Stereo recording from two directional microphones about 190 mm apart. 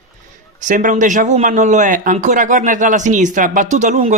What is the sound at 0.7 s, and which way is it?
Speech, 40° right (ahead or behind).